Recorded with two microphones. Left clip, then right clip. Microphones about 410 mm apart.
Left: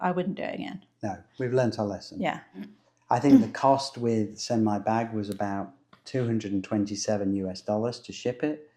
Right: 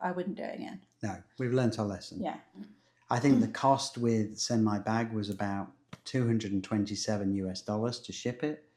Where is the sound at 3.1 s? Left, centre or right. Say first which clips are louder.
Left 7 dB; centre.